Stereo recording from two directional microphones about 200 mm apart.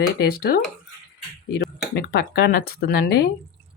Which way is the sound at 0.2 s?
50° left (ahead or behind).